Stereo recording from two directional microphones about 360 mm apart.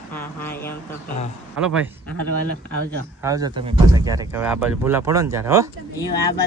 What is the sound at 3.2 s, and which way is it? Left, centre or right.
Speech, centre.